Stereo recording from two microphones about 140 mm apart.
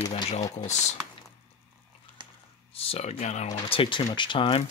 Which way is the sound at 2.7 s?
45° left (ahead or behind).